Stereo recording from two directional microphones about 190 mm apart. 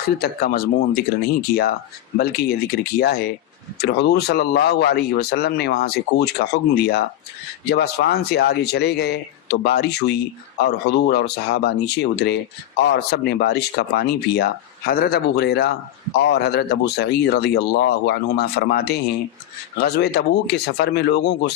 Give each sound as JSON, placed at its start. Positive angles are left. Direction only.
{"t": 0.0, "sound": "speech", "side_deg": 55}
{"t": 2.1, "sound": "speech", "side_deg": 55}